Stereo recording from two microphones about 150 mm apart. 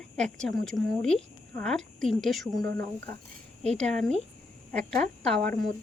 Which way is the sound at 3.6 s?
5° left (ahead or behind).